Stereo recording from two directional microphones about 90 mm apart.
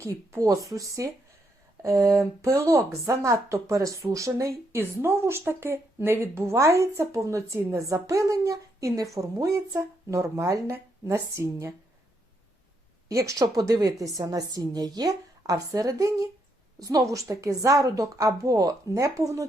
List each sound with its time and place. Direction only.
0.0 s speech: 35° right (ahead or behind)
13.1 s a woman's voice: 35° right (ahead or behind)
13.4 s a woman's voice: 50° right (ahead or behind)